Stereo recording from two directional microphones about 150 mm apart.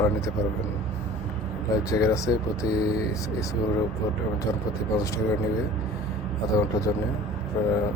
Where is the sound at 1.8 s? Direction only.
20° left (ahead or behind).